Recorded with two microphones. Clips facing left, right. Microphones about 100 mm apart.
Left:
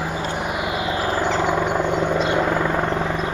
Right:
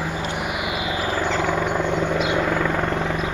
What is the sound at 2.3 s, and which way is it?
Helicopter, 15° left (ahead or behind).